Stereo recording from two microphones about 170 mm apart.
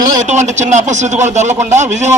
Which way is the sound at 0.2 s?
45° right (ahead or behind).